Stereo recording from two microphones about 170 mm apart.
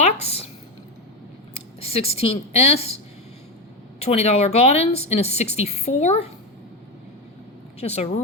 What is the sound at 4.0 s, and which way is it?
A woman's voice, 40° left (ahead or behind).